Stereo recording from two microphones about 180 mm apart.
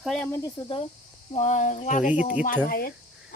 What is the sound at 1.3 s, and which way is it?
Speech, 40° left (ahead or behind).